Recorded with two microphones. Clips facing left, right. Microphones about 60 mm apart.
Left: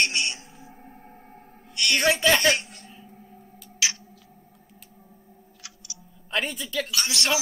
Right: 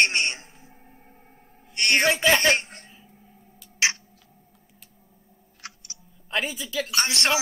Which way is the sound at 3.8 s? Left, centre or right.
Right.